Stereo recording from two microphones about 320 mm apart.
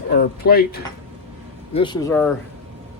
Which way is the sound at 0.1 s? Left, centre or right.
Left.